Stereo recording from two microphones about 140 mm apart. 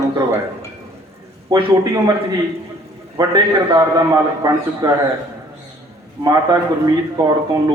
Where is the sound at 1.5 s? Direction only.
30° right (ahead or behind).